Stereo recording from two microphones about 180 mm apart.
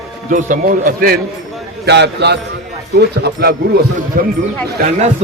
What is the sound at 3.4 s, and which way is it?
Speech, 60° right (ahead or behind).